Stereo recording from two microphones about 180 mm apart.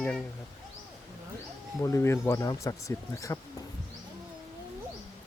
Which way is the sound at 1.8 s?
15° left (ahead or behind).